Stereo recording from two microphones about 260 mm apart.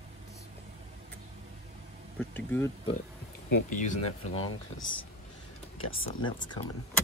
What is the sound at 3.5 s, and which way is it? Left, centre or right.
Speech, left.